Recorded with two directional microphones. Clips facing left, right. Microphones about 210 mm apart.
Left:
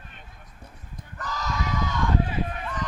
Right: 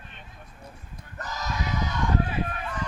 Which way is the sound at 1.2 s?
20° right (ahead or behind).